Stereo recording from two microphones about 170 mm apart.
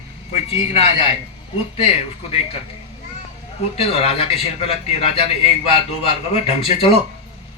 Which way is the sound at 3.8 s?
35° left (ahead or behind).